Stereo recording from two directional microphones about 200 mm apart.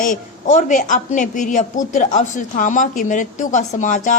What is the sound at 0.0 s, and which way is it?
A woman's voice, 40° left (ahead or behind).